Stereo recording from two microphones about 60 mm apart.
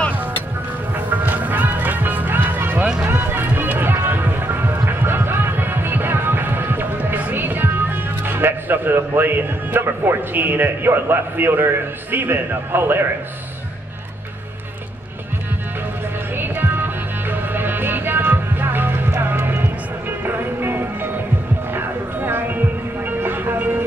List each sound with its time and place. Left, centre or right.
0.9 s music: right
2.8 s music: centre
3.1 s music: right
7.3 s speech: right
16.3 s music: right